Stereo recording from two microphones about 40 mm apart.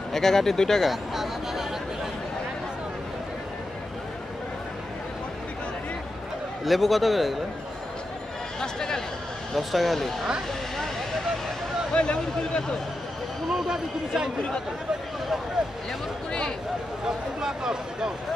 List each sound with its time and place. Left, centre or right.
0.1 s speech: centre
0.8 s a sound: centre
6.6 s a man's voice: centre
8.5 s speech: centre
9.6 s a man's voice: centre
11.9 s speech: left
13.7 s speech: centre
16.3 s speech: centre
17.0 s speech: centre